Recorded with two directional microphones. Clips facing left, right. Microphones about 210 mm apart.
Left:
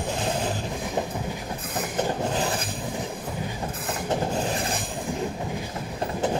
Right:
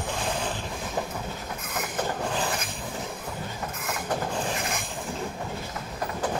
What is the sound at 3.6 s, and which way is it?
Train, 35° left (ahead or behind).